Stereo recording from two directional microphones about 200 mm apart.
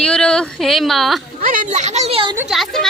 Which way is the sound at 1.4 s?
45° right (ahead or behind).